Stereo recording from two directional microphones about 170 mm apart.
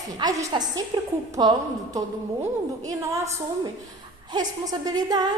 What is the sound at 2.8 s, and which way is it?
Speech, 20° right (ahead or behind).